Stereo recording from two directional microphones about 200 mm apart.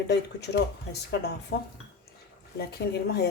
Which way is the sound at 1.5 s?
55° left (ahead or behind).